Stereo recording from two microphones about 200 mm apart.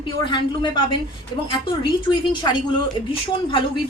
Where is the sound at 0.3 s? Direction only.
25° left (ahead or behind).